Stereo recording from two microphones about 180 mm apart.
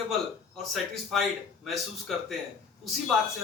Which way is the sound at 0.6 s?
Centre (ahead or behind).